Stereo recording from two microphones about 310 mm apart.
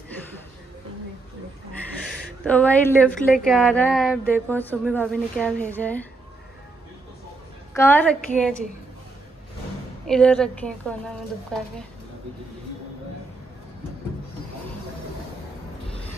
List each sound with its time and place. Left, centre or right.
2.4 s a woman's voice: centre
7.7 s a woman's voice: centre
10.0 s a woman's voice: centre